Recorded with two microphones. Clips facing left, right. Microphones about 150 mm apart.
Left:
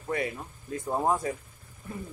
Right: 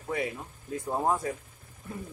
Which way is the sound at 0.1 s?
Centre (ahead or behind).